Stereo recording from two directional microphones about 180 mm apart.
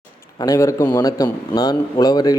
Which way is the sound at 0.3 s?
20° left (ahead or behind).